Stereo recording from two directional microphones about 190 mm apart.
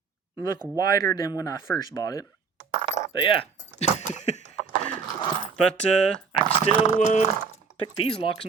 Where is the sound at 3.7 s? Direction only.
35° left (ahead or behind).